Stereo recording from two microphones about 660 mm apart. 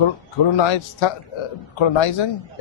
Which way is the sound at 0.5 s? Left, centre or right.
Left.